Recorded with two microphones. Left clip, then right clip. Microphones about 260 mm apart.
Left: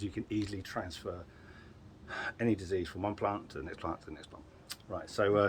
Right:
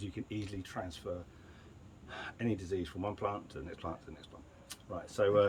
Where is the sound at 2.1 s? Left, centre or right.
Centre.